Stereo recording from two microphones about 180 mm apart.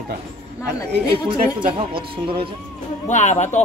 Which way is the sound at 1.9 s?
30° right (ahead or behind).